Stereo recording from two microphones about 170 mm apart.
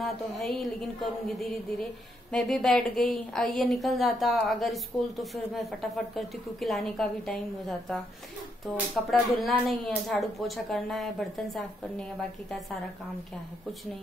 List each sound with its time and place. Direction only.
0.0 s speech: centre (ahead or behind)